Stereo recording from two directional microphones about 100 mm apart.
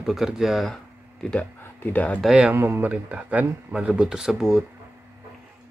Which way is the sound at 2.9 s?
15° right (ahead or behind).